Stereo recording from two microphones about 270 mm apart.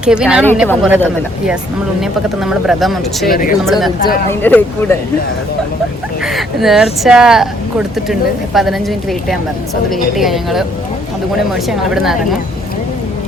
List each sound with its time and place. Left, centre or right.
0.0 s speech: centre
3.2 s speech: left
3.7 s speech: centre
6.2 s speech: centre
11.7 s speech: centre